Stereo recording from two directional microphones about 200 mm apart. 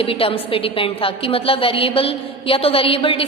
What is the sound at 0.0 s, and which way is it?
A woman's voice, 30° left (ahead or behind).